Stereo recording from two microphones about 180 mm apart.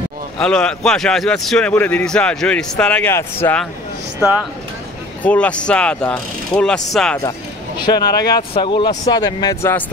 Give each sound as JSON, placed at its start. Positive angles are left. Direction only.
{"t": 0.4, "sound": "a man's voice", "side_deg": 5}
{"t": 4.2, "sound": "a man's voice", "side_deg": -5}
{"t": 5.2, "sound": "a man's voice", "side_deg": 5}
{"t": 7.2, "sound": "speech", "side_deg": 25}